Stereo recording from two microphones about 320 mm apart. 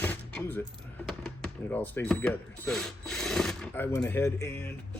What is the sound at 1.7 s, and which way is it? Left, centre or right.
Speech, centre.